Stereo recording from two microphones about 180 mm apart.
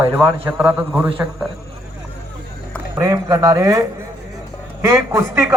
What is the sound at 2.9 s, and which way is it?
A man's voice, 15° right (ahead or behind).